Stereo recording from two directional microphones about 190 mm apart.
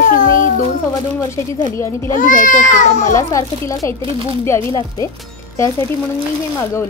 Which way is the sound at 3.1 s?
15° left (ahead or behind).